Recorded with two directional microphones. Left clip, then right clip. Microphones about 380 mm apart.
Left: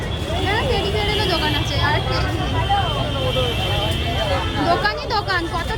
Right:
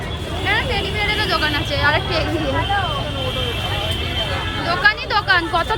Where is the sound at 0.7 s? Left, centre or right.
Left.